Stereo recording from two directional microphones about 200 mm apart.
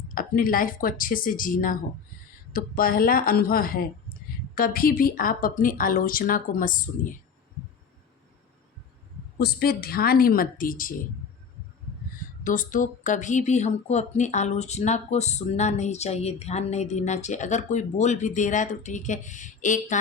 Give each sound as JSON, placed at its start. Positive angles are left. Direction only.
{"t": 0.1, "sound": "a woman's voice", "side_deg": 45}
{"t": 9.4, "sound": "a woman's voice", "side_deg": 50}
{"t": 12.4, "sound": "speech", "side_deg": 40}